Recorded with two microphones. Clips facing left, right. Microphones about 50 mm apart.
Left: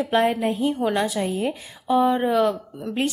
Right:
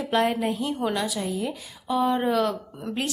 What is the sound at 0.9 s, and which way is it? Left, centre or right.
A woman's voice, left.